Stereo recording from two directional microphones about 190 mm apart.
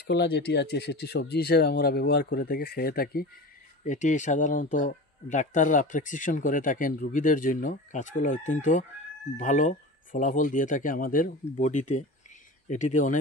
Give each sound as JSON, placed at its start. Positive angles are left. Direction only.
{"t": 0.1, "sound": "speech", "side_deg": 60}
{"t": 3.8, "sound": "speech", "side_deg": 40}